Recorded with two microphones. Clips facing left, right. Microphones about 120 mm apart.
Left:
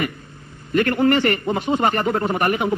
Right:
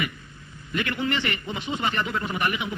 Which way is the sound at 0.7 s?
45° left (ahead or behind).